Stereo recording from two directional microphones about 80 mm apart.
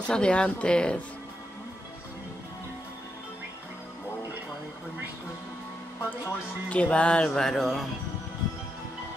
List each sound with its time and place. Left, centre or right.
0.0 s speech: centre
6.0 s speech: centre
7.2 s a sound: centre